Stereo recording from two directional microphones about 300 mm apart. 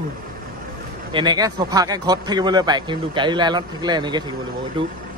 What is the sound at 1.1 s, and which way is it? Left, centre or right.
Speech, centre.